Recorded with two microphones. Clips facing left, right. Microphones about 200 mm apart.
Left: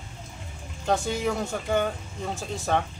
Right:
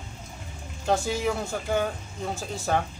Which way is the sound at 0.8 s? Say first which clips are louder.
Even; 5° right (ahead or behind).